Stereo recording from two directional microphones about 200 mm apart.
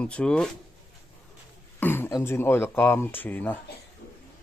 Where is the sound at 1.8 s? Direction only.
10° left (ahead or behind).